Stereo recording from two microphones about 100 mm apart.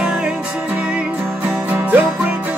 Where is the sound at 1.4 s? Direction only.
10° right (ahead or behind).